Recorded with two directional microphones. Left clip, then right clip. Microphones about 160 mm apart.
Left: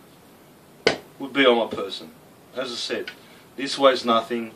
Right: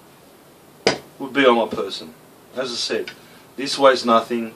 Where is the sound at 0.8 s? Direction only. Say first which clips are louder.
Right 2 dB; 5° right (ahead or behind).